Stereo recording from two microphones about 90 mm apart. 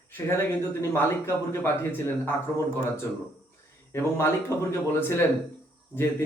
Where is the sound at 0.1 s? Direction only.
25° left (ahead or behind).